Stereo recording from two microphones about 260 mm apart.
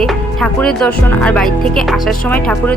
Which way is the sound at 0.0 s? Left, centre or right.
Centre.